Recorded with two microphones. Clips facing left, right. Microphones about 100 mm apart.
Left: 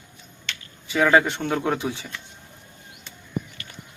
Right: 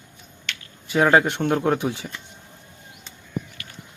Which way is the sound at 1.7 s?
5° right (ahead or behind).